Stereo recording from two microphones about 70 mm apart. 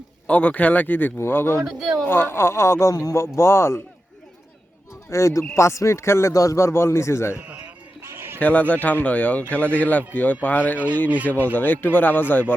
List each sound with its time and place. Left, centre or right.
0.3 s a man's voice: left
1.6 s speech: centre
2.0 s a man's voice: left
2.9 s speech: left
3.2 s a man's voice: left
5.0 s a man's voice: left
7.4 s a sound: centre
8.0 s a sound: right
8.4 s speech: left